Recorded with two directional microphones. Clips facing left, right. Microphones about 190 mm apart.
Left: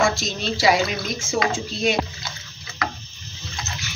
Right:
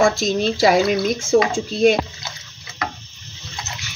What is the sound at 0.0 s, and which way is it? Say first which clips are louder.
Speech: right 6 dB; 50° right (ahead or behind).